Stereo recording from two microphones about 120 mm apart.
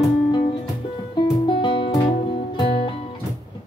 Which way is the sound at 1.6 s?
40° left (ahead or behind).